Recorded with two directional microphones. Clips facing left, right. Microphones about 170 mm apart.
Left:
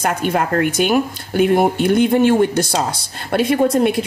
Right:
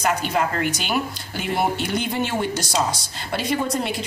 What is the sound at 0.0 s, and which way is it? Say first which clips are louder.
Speech: left 3 dB; 55° left (ahead or behind).